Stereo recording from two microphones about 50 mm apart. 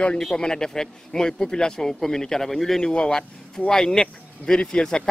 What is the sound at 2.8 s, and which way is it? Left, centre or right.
A man's voice, centre.